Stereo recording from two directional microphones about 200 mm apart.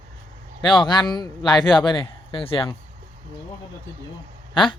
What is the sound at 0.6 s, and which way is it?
Speech, 25° left (ahead or behind).